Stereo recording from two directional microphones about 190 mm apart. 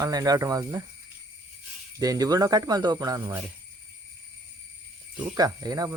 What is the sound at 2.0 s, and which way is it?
Speech, 20° right (ahead or behind).